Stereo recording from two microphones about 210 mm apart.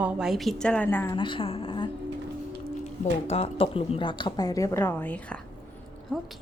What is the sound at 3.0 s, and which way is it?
A woman's voice, 30° left (ahead or behind).